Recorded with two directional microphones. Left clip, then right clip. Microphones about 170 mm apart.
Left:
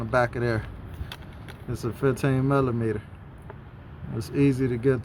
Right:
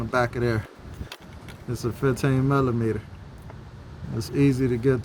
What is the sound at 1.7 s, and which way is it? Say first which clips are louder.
Speech: even; centre (ahead or behind).